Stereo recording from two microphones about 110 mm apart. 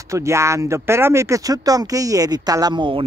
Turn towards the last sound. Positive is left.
turn(degrees=-45)  # may be behind; listen again after turning